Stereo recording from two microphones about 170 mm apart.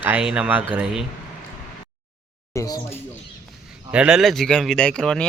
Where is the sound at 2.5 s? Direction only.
15° left (ahead or behind).